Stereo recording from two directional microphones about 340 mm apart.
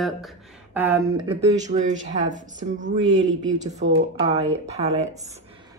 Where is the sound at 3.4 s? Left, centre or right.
Centre.